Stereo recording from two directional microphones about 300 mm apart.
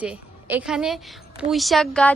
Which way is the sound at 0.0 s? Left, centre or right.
Centre.